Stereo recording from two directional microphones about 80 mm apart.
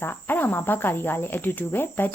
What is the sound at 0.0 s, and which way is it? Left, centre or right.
Speech, left.